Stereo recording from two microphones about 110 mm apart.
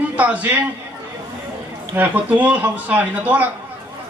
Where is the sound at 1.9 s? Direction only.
15° right (ahead or behind).